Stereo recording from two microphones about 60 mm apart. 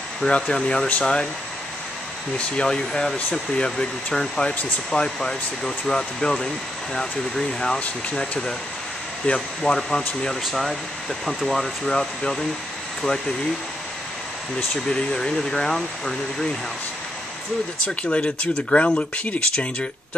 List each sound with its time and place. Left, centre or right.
0.2 s speech: centre
2.3 s speech: centre
11.9 s speech: centre
14.9 s speech: centre
17.8 s speech: centre